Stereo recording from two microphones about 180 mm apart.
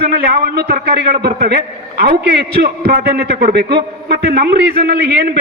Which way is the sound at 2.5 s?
60° right (ahead or behind).